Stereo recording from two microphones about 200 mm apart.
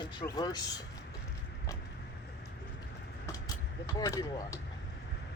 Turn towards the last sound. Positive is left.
turn(degrees=15)  # may be behind; listen again after turning